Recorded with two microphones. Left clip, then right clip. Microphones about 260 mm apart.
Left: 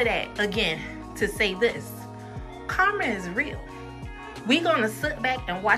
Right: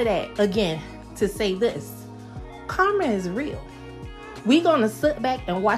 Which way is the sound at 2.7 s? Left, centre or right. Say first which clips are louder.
Right 2 dB; centre.